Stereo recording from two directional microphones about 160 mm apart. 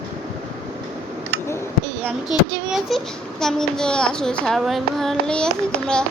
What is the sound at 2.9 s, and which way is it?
Child singing, centre (ahead or behind).